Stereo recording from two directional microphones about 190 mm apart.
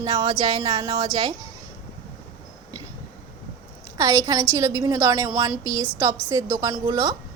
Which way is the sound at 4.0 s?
15° right (ahead or behind).